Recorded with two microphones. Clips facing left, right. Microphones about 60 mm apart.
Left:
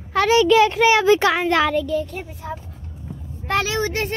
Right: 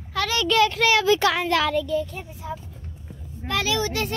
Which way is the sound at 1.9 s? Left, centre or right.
Left.